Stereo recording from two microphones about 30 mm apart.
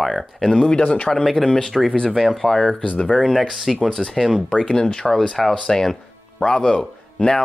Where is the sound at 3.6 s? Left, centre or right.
Centre.